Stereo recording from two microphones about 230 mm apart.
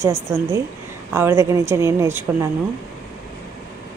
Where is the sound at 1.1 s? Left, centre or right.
Centre.